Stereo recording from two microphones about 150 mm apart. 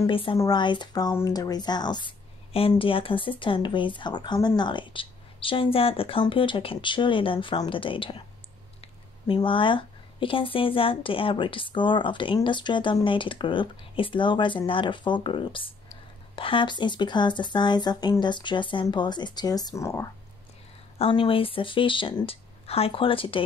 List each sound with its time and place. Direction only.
0.0 s speech: 35° left (ahead or behind); by 20.1 s 20° left (ahead or behind)
21.0 s speech: 35° left (ahead or behind)